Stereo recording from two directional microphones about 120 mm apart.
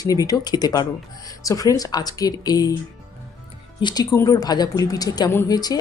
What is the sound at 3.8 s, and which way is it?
Speech, 40° left (ahead or behind).